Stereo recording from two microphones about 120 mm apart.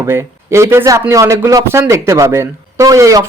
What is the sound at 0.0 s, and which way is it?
Speech, 20° right (ahead or behind).